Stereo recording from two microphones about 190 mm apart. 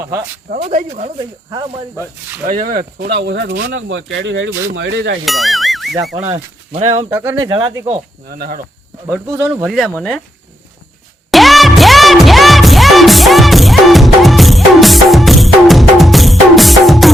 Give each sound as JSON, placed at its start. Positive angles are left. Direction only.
{"t": 0.5, "sound": "speech", "side_deg": -45}
{"t": 1.2, "sound": "speech", "side_deg": -20}
{"t": 2.5, "sound": "speech", "side_deg": -45}
{"t": 5.2, "sound": "speech", "side_deg": 0}
{"t": 6.1, "sound": "speech", "side_deg": -35}
{"t": 7.1, "sound": "speech", "side_deg": -15}
{"t": 8.3, "sound": "speech", "side_deg": -50}
{"t": 9.0, "sound": "speech", "side_deg": -10}
{"t": 11.3, "sound": "music", "side_deg": 0}